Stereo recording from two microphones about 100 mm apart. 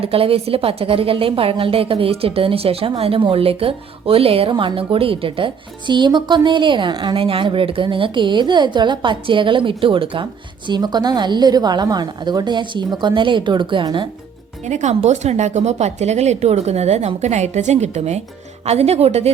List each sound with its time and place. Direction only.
0.0 s a woman's voice: 70° right (ahead or behind)
10.7 s a woman's voice: 45° right (ahead or behind)
15.0 s speech: 90° right
18.6 s speech: 90° right